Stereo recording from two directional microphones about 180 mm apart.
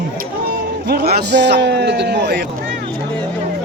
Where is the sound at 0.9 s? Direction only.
65° right (ahead or behind).